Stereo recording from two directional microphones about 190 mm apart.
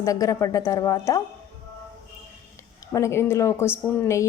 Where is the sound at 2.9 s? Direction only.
15° left (ahead or behind).